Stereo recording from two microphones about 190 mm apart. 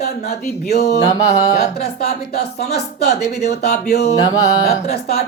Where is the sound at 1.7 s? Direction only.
55° left (ahead or behind).